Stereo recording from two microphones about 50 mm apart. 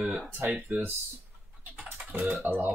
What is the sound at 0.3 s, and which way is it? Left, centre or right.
Speech, right.